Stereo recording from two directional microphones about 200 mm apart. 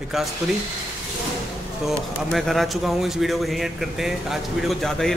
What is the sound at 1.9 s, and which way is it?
Speech, centre (ahead or behind).